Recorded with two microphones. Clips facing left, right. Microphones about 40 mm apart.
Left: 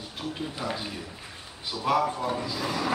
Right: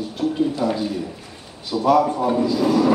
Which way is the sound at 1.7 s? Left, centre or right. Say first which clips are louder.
Right 9 dB; centre.